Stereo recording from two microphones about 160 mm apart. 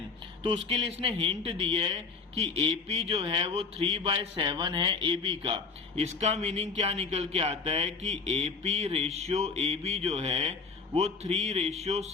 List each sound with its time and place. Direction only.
0.4 s speech: 35° right (ahead or behind)